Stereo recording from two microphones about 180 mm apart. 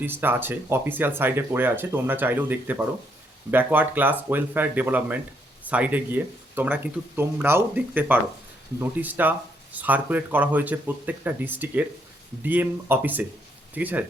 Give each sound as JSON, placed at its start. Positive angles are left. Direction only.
{"t": 0.0, "sound": "speech", "side_deg": -10}